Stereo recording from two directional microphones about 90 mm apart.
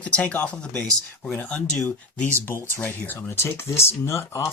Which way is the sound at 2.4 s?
25° left (ahead or behind).